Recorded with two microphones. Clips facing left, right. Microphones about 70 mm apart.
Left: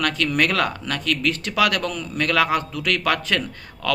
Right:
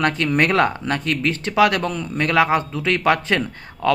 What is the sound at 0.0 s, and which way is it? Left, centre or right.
A man's voice, right.